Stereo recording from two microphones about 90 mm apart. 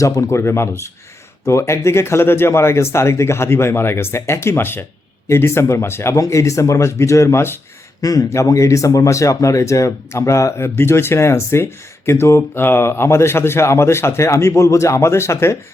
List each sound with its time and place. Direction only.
0.0 s speech: 35° left (ahead or behind)
8.0 s speech: 40° left (ahead or behind)